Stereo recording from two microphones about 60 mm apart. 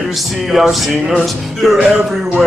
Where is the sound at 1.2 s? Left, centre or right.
Centre.